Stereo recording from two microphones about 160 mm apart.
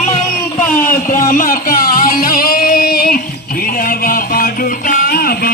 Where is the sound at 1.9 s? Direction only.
65° left (ahead or behind).